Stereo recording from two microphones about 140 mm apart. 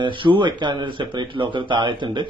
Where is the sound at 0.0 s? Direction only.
35° right (ahead or behind).